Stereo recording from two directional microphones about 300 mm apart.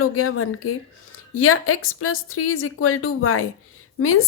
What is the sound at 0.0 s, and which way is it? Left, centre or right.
A woman's voice, left.